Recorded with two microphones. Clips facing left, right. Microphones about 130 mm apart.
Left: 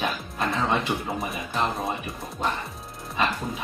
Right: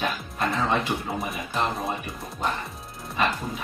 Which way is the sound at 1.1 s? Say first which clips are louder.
Even; centre (ahead or behind).